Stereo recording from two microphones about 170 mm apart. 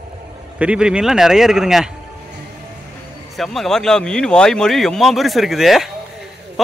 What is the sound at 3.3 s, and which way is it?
A man's voice, centre (ahead or behind).